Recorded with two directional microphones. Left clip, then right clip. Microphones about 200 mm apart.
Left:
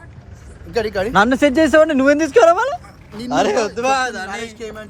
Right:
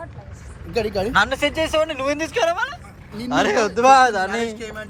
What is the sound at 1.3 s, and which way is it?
Speech, 60° left (ahead or behind).